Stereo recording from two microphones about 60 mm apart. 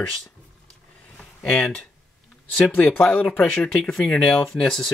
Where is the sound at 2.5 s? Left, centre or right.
Left; by 4.9 s centre.